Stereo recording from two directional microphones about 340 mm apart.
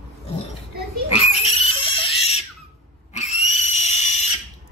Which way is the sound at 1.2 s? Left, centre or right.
Centre.